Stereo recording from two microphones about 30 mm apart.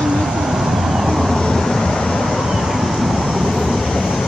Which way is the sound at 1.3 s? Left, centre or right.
Left.